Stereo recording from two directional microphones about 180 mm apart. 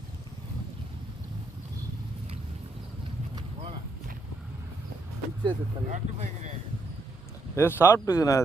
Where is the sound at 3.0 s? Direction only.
25° right (ahead or behind).